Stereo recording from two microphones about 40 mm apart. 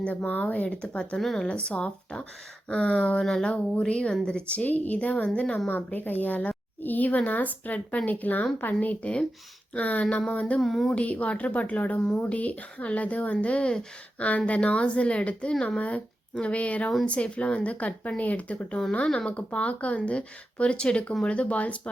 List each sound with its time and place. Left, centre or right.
0.0 s speech: left
1.1 s speech: centre
1.5 s speech: left
3.2 s speech: centre
4.6 s speech: left
5.6 s speech: left
10.6 s speech: centre
10.9 s speech: left
19.0 s speech: left
19.3 s speech: left; by 21.2 s centre
21.2 s speech: left